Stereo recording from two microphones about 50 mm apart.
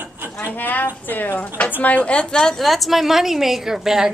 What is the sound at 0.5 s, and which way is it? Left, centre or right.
A woman's voice, left.